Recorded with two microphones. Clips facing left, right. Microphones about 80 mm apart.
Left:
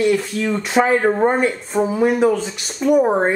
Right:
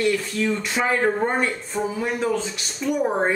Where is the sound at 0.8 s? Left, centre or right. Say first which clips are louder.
Left 2 dB; centre.